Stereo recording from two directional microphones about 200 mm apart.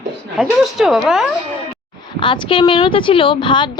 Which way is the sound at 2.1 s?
25° left (ahead or behind).